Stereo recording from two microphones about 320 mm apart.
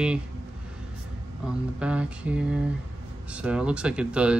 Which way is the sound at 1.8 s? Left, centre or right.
Centre.